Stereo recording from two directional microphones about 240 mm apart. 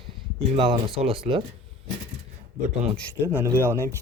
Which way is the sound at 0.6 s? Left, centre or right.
Centre.